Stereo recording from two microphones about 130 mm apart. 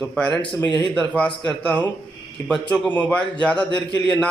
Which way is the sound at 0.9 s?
5° left (ahead or behind).